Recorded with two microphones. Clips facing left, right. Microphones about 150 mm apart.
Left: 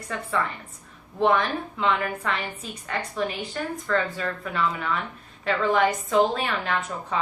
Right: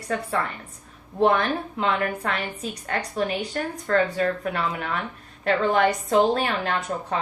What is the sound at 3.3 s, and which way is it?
A woman's voice, 60° right (ahead or behind).